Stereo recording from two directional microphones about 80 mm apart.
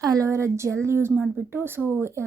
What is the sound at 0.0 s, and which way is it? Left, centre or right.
A woman's voice, right.